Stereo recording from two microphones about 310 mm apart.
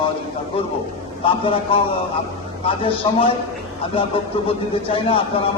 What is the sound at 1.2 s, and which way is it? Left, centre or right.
A man's voice, centre.